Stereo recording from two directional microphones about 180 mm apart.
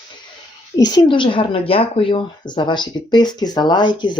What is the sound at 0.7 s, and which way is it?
Speech, 20° left (ahead or behind).